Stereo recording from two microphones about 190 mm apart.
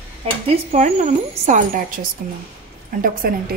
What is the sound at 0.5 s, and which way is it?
Speech, 35° right (ahead or behind).